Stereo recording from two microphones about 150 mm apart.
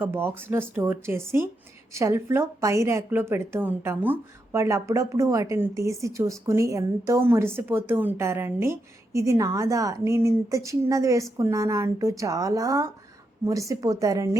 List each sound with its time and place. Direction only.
0.0 s a woman's voice: 15° right (ahead or behind)